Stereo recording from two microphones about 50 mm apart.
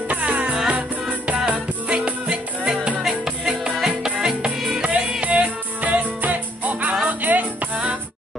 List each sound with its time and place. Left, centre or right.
0.1 s music: right; by 4.8 s centre
4.8 s music: right